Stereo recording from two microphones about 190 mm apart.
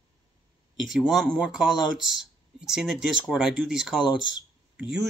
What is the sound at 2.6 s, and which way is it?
Speech, centre (ahead or behind).